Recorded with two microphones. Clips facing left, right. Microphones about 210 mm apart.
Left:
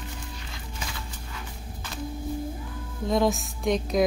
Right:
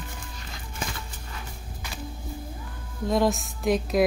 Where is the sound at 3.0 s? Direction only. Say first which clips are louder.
Even; centre (ahead or behind).